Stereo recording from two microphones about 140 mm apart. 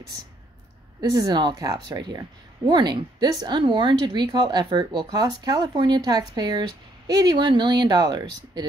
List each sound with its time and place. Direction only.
1.1 s speech: 30° right (ahead or behind)